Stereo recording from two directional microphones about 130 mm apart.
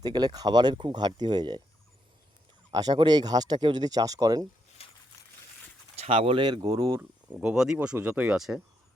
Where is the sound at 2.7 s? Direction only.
30° right (ahead or behind).